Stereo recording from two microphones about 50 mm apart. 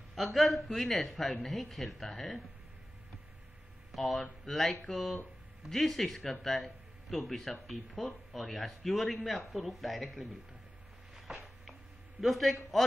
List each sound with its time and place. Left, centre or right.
0.1 s a man's voice: centre
3.9 s speech: centre
11.1 s a sound: centre
12.2 s speech: centre